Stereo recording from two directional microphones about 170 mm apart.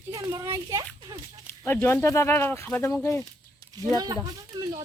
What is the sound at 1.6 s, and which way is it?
Speech, 15° left (ahead or behind).